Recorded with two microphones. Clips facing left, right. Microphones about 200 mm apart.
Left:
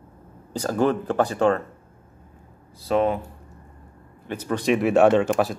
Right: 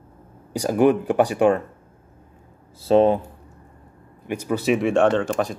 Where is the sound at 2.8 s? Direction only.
30° right (ahead or behind).